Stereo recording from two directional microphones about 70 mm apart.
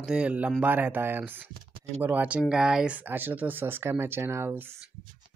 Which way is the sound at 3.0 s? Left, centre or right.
Right.